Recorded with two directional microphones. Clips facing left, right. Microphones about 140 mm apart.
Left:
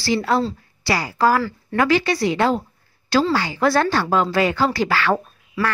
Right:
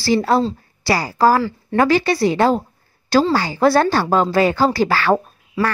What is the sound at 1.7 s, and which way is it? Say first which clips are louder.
A woman's voice: right 3 dB; 35° right (ahead or behind).